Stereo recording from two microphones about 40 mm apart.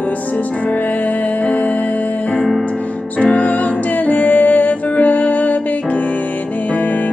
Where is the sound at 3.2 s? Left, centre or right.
Left.